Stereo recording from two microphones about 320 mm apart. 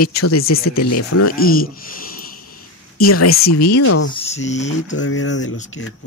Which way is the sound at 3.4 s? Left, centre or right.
Left.